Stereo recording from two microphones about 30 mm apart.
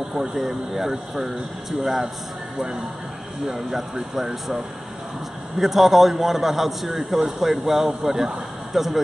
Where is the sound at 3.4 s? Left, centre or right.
Centre.